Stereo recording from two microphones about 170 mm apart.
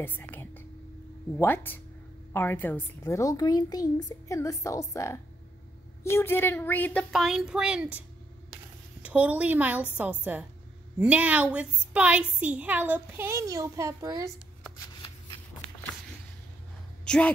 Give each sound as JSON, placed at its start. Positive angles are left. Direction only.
{"t": 0.0, "sound": "whispering", "side_deg": 10}
{"t": 1.3, "sound": "a woman's voice", "side_deg": 10}
{"t": 7.1, "sound": "speech", "side_deg": 0}
{"t": 9.0, "sound": "a woman's voice", "side_deg": -10}
{"t": 14.8, "sound": "shuffling cards", "side_deg": 25}
{"t": 17.0, "sound": "a sound", "side_deg": 5}